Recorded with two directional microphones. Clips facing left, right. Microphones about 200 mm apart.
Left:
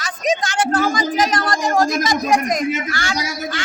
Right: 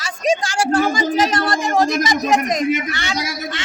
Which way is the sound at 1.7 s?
Centre (ahead or behind).